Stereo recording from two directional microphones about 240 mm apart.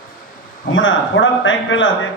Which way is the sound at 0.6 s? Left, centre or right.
Left.